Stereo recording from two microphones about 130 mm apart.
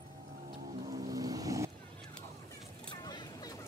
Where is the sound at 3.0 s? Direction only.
35° left (ahead or behind).